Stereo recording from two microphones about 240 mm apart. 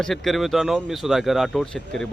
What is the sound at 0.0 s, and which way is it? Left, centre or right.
Speech, centre.